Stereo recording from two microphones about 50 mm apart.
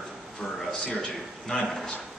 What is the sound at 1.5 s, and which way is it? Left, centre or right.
Speech, left.